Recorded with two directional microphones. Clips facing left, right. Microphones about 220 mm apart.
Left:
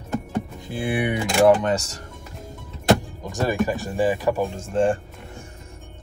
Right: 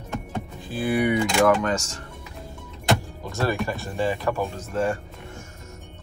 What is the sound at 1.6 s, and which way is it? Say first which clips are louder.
Speech: left 2 dB; 35° left (ahead or behind).